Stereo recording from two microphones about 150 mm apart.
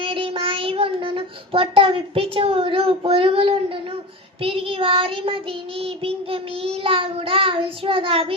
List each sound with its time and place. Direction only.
0.0 s child singing: 40° right (ahead or behind)